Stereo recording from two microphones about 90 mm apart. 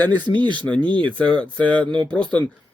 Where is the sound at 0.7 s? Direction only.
15° left (ahead or behind).